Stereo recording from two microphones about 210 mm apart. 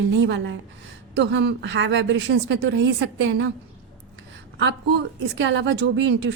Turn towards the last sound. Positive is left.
turn(degrees=-55)  # may be behind; listen again after turning